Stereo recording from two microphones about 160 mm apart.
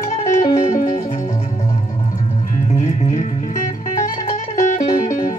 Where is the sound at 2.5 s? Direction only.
50° left (ahead or behind).